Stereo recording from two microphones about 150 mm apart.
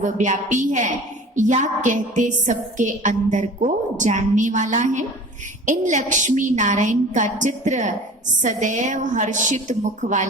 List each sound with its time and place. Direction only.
0.0 s a woman's voice: 55° right (ahead or behind)